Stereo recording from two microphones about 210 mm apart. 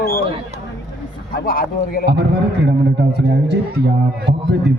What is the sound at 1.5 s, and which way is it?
Speech, 45° left (ahead or behind).